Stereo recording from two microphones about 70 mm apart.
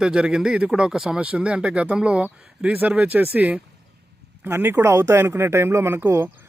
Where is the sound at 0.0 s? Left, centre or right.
Centre.